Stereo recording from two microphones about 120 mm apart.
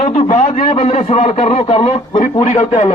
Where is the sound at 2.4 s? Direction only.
75° left (ahead or behind).